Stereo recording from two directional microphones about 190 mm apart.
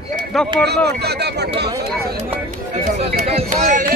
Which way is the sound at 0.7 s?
60° right (ahead or behind).